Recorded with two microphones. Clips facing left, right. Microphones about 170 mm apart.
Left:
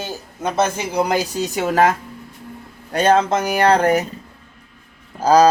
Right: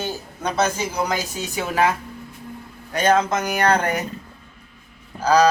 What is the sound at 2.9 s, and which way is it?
Speech, 30° left (ahead or behind).